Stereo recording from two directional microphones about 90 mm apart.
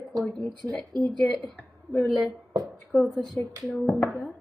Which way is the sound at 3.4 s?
25° left (ahead or behind).